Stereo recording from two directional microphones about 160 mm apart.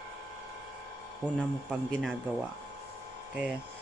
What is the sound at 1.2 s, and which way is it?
Speech, 5° left (ahead or behind).